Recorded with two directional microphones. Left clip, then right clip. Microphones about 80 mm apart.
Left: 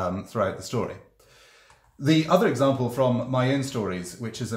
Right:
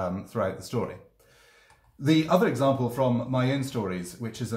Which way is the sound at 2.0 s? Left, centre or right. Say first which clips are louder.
Left 2 dB; centre.